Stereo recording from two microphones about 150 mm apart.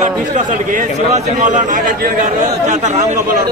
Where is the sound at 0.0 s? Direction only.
55° right (ahead or behind).